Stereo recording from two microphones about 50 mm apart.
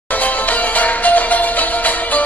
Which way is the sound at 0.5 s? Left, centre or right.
Left.